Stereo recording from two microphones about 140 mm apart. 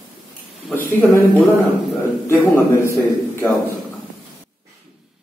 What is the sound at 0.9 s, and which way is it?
A man's voice, 15° left (ahead or behind).